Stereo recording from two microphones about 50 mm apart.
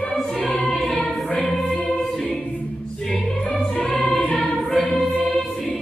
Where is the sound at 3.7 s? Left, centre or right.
Centre.